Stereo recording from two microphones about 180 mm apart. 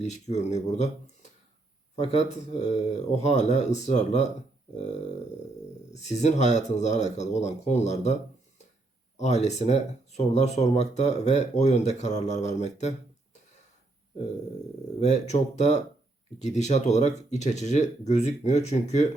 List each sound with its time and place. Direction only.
0.0 s speech: 40° left (ahead or behind)
5.9 s speech: 40° left (ahead or behind)
15.0 s speech: 40° left (ahead or behind)